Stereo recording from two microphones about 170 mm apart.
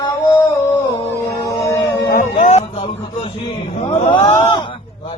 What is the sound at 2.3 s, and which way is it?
A man's voice, 45° left (ahead or behind).